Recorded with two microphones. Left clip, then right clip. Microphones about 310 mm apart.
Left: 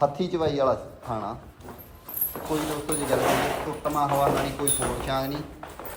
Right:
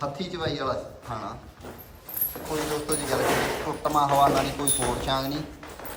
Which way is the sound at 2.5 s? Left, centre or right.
Centre.